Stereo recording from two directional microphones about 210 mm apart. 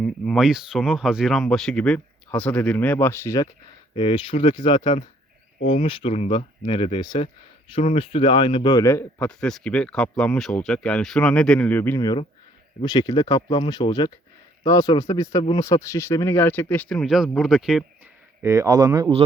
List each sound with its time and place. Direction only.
0.0 s a man's voice: centre (ahead or behind)
18.4 s speech: 15° right (ahead or behind)